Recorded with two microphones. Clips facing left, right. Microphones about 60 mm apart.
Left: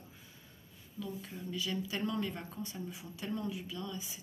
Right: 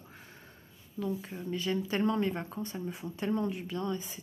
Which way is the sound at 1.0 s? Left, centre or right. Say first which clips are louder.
Right 7 dB; right.